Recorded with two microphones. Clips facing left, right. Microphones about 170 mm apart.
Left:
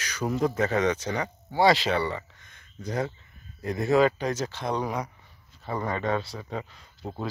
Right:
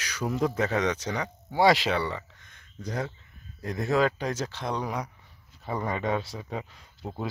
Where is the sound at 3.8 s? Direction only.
5° left (ahead or behind).